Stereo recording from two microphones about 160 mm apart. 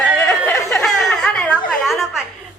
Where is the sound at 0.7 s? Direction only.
5° left (ahead or behind).